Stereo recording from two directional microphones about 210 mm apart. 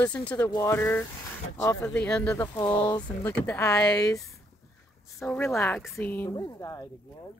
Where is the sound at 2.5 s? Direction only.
20° left (ahead or behind).